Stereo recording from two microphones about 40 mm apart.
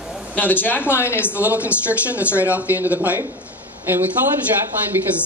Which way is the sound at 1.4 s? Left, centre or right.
Right.